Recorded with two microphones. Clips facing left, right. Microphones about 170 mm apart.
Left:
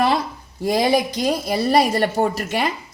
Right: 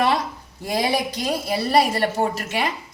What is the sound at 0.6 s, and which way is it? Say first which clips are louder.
A woman's voice: left 5 dB; 40° left (ahead or behind).